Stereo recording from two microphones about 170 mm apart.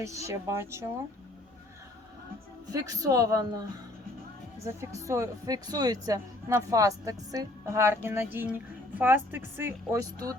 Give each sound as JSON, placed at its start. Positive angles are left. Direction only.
{"t": 0.3, "sound": "speech", "side_deg": -15}
{"t": 2.7, "sound": "speech", "side_deg": -20}
{"t": 5.0, "sound": "speech", "side_deg": -20}